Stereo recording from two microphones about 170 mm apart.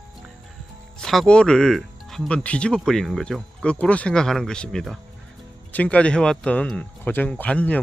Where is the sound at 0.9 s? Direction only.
5° left (ahead or behind).